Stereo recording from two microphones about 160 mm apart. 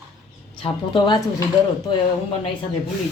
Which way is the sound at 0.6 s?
30° left (ahead or behind).